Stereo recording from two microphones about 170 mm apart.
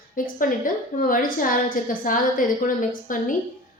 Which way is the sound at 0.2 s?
55° left (ahead or behind).